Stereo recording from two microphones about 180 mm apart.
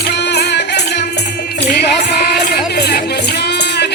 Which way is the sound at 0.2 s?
70° left (ahead or behind).